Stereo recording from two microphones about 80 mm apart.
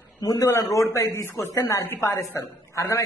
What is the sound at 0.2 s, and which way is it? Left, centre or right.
A man's voice, left.